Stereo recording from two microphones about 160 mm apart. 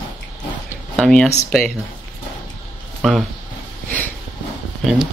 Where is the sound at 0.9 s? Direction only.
5° left (ahead or behind).